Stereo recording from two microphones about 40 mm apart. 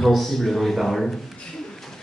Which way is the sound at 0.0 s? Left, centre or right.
Centre.